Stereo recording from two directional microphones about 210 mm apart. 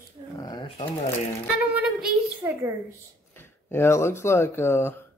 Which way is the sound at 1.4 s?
5° right (ahead or behind).